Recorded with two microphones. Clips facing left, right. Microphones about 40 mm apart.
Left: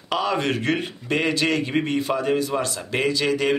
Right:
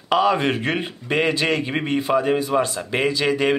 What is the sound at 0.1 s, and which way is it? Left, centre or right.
A man's voice, centre.